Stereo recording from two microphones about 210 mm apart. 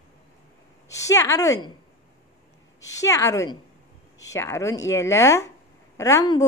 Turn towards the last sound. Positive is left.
turn(degrees=15)  # may be behind; listen again after turning